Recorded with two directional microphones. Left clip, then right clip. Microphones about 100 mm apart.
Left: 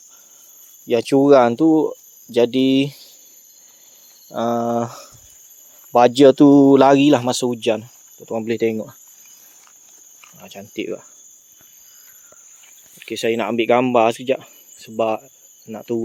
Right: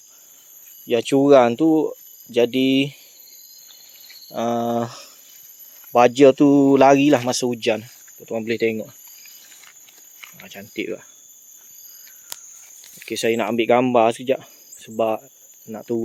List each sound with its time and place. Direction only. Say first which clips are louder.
0.9 s speech: left 2 dB; 35° left (ahead or behind)
4.3 s speech: left 2 dB; 30° left (ahead or behind)
5.9 s speech: left 2 dB; 50° left (ahead or behind)
7.2 s speech: left 2 dB; 30° left (ahead or behind)
10.4 s speech: left 1 dB; 20° left (ahead or behind)
13.1 s speech: even; 5° left (ahead or behind)